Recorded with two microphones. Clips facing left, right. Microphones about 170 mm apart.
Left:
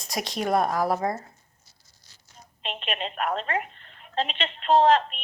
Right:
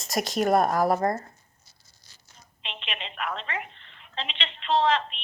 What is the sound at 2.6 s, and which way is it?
A woman's voice, 45° left (ahead or behind).